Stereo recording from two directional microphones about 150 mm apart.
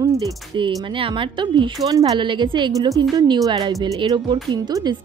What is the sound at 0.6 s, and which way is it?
Speech, 35° right (ahead or behind).